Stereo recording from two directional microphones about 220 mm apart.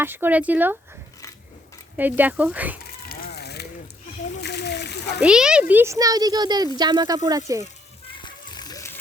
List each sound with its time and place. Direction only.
0.0 s speech: 10° right (ahead or behind)
2.0 s speech: 10° right (ahead or behind)
3.1 s a sound: 45° left (ahead or behind)
4.4 s splash: 50° left (ahead or behind)
5.2 s speech: 5° right (ahead or behind)
8.2 s music: 20° left (ahead or behind)